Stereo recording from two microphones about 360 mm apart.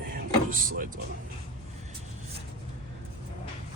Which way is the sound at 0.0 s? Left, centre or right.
Right.